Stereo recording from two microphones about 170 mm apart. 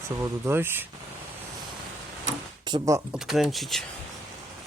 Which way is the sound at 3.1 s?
Centre (ahead or behind).